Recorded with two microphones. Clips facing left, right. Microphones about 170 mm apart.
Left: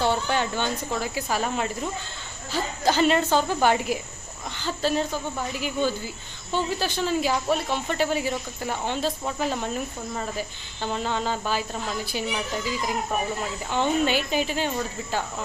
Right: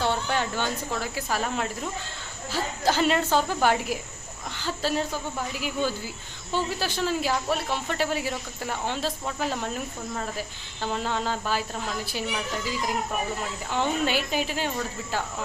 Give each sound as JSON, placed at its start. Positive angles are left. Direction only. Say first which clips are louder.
{"t": 0.0, "sound": "speech", "louder": "left 2 dB", "side_deg": 0}
{"t": 13.7, "sound": "speech", "louder": "left 3 dB", "side_deg": 0}